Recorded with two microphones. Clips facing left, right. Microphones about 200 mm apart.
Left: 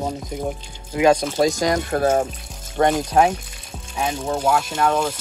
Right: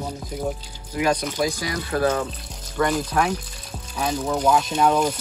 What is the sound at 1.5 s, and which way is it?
Speech, 45° left (ahead or behind).